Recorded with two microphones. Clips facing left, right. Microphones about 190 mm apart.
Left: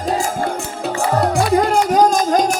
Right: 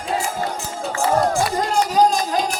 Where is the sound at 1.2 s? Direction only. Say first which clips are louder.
Left 4 dB; 65° left (ahead or behind); by 2.5 s 45° left (ahead or behind).